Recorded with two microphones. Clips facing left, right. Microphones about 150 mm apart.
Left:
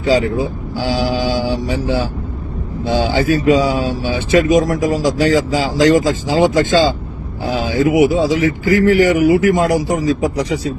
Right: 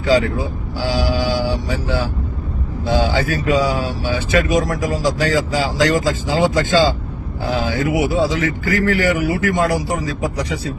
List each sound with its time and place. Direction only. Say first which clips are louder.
0.0 s speech: left 2 dB; 20° left (ahead or behind)